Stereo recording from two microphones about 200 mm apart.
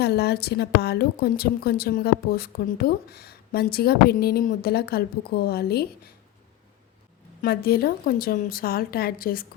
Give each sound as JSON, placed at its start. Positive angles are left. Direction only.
{"t": 0.0, "sound": "a woman's voice", "side_deg": 55}
{"t": 7.4, "sound": "a woman's voice", "side_deg": 50}